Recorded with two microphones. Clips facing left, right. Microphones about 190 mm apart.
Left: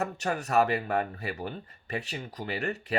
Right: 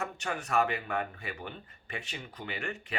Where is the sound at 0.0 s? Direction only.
40° left (ahead or behind).